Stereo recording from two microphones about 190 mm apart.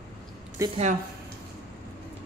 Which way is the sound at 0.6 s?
15° right (ahead or behind).